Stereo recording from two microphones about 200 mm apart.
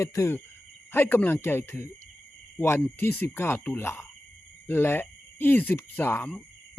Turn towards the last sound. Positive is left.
turn(degrees=10)  # may be behind; listen again after turning